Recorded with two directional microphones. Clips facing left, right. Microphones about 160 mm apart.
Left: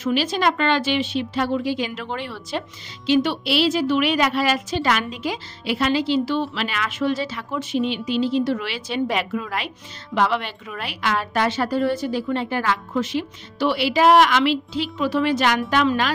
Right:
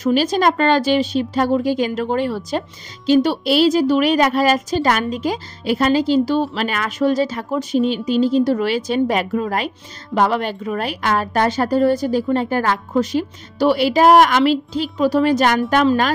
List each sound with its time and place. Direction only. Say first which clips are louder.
0.0 s a woman's voice: right 5 dB; 40° right (ahead or behind)